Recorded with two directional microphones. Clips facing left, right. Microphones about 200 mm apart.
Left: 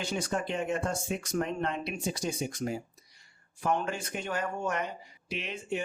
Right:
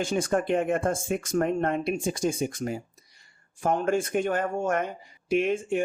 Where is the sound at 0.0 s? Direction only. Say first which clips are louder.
Right 7 dB; 50° right (ahead or behind).